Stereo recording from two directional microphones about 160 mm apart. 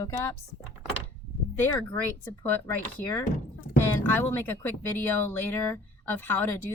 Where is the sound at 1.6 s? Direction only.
10° left (ahead or behind).